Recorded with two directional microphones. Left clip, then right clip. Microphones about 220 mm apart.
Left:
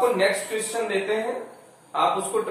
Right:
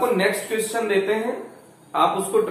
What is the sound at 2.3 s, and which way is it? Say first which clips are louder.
Speech: right 5 dB; 15° right (ahead or behind).